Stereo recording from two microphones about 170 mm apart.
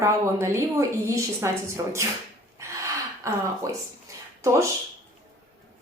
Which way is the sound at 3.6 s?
20° right (ahead or behind).